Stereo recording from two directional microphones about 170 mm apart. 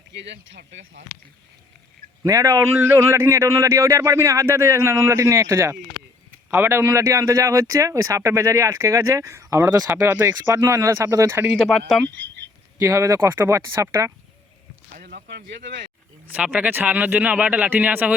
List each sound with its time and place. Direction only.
0.1 s speech: 90° right
2.2 s a man's voice: 20° right (ahead or behind)
11.5 s speech: centre (ahead or behind)
12.8 s a man's voice: 15° right (ahead or behind)
14.9 s speech: 70° right (ahead or behind); by 15.9 s 90° right
16.3 s a man's voice: 10° right (ahead or behind)